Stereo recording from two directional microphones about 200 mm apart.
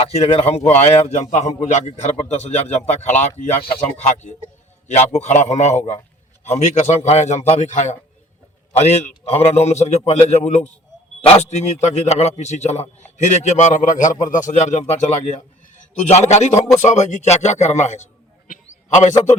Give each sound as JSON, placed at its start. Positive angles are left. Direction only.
{"t": 0.1, "sound": "a man's voice", "side_deg": 30}
{"t": 16.0, "sound": "a man's voice", "side_deg": 35}